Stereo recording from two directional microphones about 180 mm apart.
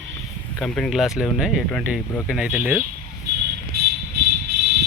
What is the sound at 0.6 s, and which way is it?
Speech, 5° left (ahead or behind).